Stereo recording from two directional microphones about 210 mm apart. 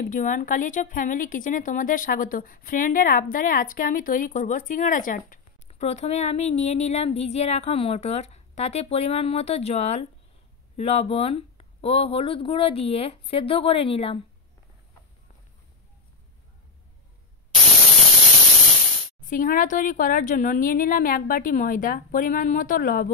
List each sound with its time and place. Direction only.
0.0 s a woman's voice: 40° left (ahead or behind)
19.2 s a woman's voice: 40° left (ahead or behind)